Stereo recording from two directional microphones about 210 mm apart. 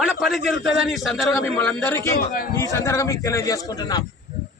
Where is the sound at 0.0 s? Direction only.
Centre (ahead or behind).